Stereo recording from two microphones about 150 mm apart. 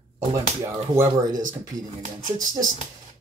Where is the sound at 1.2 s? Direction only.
60° right (ahead or behind).